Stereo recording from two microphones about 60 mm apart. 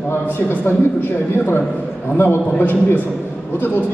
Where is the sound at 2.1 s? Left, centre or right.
Left.